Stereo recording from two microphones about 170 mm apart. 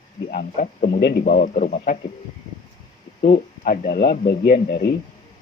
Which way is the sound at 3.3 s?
60° left (ahead or behind).